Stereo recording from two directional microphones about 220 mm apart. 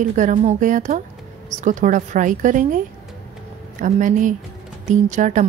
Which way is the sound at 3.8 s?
35° right (ahead or behind).